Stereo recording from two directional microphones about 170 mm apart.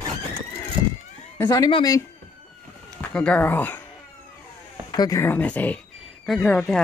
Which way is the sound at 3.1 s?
5° left (ahead or behind).